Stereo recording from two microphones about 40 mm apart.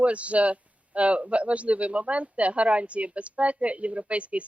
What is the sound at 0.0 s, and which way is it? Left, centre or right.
Speech, right.